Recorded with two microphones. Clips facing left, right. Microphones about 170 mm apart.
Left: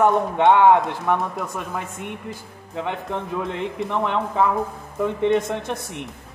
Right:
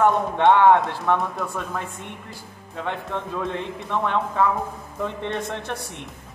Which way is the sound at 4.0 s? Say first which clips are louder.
Even; 20° left (ahead or behind).